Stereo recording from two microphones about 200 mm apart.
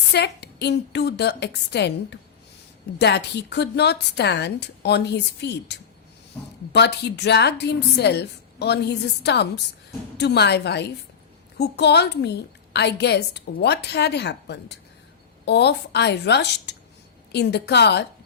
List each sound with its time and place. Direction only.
0.1 s a woman's voice: 55° left (ahead or behind)